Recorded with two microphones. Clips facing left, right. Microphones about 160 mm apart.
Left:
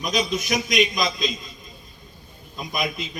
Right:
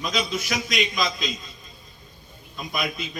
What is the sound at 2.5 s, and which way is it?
Speech, 20° left (ahead or behind).